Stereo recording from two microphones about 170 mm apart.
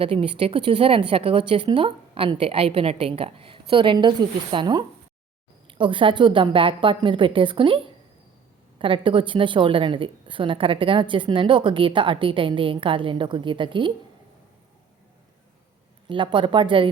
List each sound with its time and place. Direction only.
0.0 s a woman's voice: 30° right (ahead or behind)
8.8 s a woman's voice: 30° right (ahead or behind)
16.0 s a woman's voice: 30° right (ahead or behind)